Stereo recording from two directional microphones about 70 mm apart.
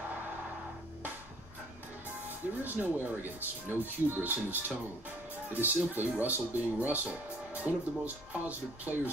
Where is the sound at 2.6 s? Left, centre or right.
Right.